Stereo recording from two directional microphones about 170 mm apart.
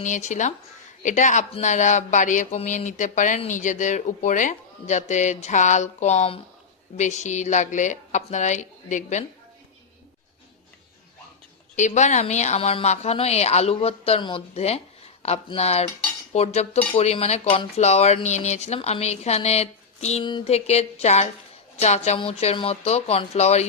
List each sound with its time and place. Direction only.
0.0 s speech: 45° left (ahead or behind)
11.8 s a woman's voice: 45° left (ahead or behind)